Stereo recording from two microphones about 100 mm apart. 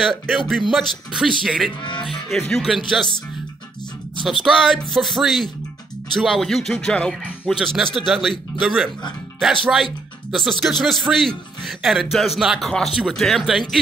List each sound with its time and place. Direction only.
0.0 s speech: 5° left (ahead or behind)
1.8 s speech: 50° left (ahead or behind)
2.0 s speech: centre (ahead or behind)
4.3 s speech: centre (ahead or behind)